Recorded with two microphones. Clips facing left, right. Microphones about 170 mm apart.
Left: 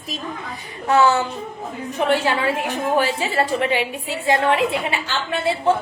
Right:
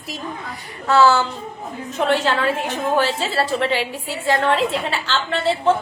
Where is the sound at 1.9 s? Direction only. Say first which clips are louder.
Even; 15° left (ahead or behind).